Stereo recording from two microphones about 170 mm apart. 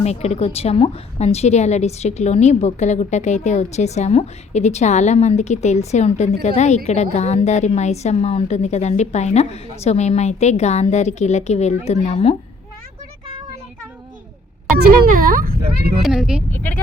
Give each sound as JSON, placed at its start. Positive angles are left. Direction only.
{"t": 0.0, "sound": "a woman's voice", "side_deg": 40}
{"t": 15.1, "sound": "speech", "side_deg": -55}
{"t": 16.0, "sound": "speech", "side_deg": -5}
{"t": 16.5, "sound": "speech", "side_deg": 10}